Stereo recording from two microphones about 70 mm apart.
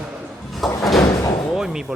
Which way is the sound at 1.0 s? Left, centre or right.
Left.